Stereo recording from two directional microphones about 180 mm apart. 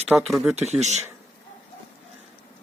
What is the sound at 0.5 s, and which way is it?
Speech, 40° right (ahead or behind).